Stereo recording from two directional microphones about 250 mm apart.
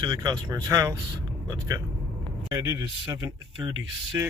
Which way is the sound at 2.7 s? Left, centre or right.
Centre.